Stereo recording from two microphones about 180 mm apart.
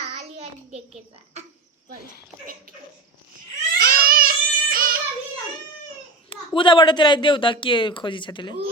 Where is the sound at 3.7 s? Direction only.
55° right (ahead or behind).